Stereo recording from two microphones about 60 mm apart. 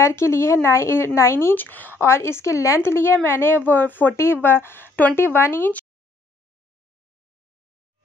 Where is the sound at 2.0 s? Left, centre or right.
Left.